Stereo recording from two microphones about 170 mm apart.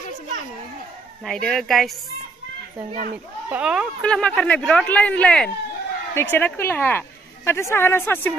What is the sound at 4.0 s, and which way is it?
Speech, 5° left (ahead or behind).